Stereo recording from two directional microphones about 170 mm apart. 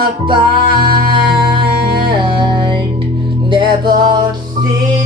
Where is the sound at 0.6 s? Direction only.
60° right (ahead or behind).